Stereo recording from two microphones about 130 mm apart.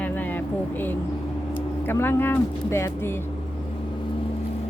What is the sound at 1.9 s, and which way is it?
Speech, 15° left (ahead or behind).